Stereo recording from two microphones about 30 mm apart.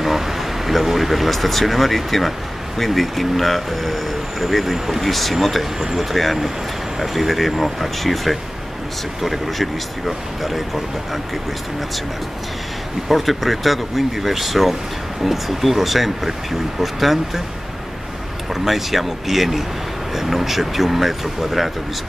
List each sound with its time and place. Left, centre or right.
0.0 s speech: centre
13.1 s speech: centre
18.5 s speech: centre